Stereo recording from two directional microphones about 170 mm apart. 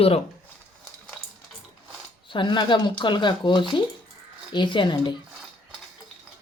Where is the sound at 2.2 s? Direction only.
30° left (ahead or behind).